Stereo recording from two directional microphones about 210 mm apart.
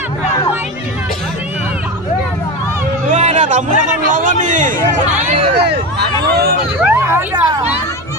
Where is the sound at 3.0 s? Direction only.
35° right (ahead or behind).